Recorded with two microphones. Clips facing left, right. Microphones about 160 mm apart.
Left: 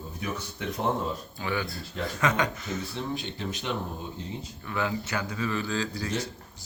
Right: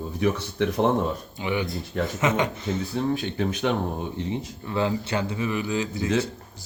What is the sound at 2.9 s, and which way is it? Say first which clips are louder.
Speech: right 8 dB; 50° right (ahead or behind).